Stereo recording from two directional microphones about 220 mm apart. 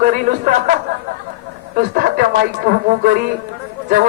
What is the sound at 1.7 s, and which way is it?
Speech, 40° right (ahead or behind).